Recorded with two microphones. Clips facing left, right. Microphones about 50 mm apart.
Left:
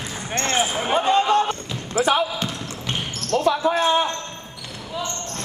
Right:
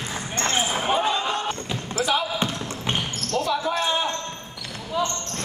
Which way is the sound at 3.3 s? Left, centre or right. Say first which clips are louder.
Left 5 dB; left.